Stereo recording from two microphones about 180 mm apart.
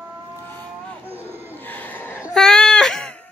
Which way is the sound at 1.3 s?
10° right (ahead or behind).